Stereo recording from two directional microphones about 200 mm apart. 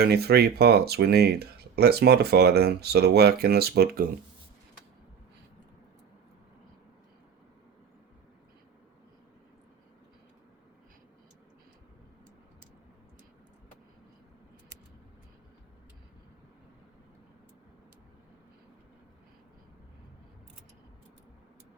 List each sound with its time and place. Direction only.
0.0 s speech: 50° right (ahead or behind)